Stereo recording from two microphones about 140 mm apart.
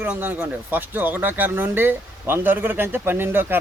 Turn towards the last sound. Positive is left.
turn(degrees=-15)  # may be behind; listen again after turning